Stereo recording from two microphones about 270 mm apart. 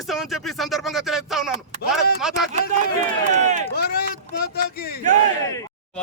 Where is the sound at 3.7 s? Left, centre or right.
Left.